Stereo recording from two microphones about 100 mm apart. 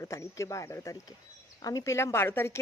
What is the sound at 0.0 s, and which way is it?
Speech, 30° left (ahead or behind).